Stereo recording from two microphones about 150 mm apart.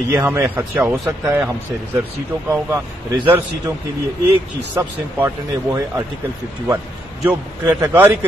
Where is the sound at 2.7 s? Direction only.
15° right (ahead or behind).